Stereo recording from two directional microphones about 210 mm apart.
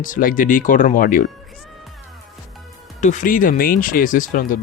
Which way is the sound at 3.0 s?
40° left (ahead or behind).